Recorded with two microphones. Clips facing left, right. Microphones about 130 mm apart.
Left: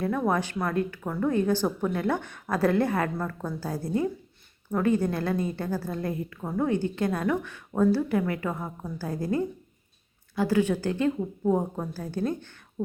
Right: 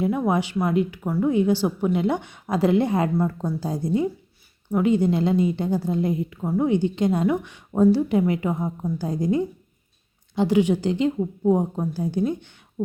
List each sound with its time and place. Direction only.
0.0 s a woman's voice: 15° right (ahead or behind)